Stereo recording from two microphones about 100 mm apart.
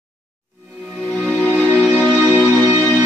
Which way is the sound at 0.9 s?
10° left (ahead or behind).